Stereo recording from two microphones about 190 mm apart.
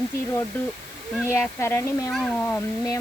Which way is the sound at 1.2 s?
15° left (ahead or behind).